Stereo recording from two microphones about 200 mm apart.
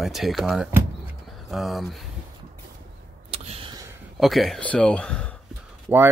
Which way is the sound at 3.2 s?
30° right (ahead or behind).